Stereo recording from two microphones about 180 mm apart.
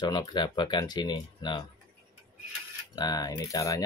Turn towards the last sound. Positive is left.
turn(degrees=20)  # may be behind; listen again after turning